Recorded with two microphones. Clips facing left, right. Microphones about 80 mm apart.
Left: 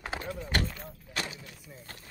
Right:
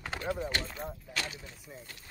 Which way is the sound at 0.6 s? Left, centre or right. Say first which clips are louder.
Even; centre.